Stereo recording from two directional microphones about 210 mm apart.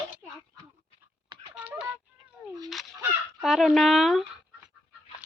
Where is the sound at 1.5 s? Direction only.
5° right (ahead or behind).